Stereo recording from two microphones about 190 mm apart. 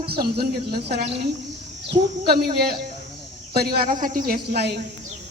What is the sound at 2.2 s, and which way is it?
Speech, 55° right (ahead or behind).